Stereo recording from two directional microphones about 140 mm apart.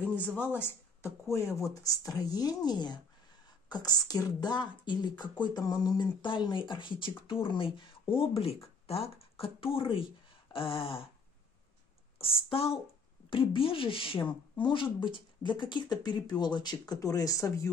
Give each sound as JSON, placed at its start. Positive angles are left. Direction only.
{"t": 0.1, "sound": "speech", "side_deg": 10}
{"t": 12.2, "sound": "speech", "side_deg": 40}